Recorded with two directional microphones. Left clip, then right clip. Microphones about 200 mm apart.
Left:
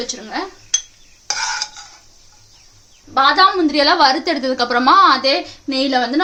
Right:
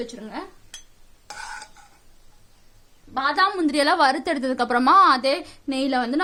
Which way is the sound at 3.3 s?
50° right (ahead or behind).